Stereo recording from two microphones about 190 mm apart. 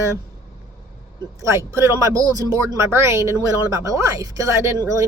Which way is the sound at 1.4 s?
15° right (ahead or behind).